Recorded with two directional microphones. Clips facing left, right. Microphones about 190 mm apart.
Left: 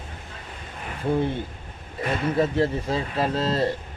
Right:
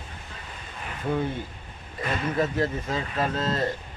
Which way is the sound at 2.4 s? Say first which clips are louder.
Left 4 dB; 30° left (ahead or behind).